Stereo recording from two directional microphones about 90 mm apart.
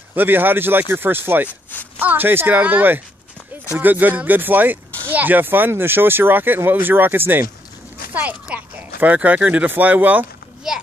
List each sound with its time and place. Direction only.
0.1 s speech: 20° right (ahead or behind)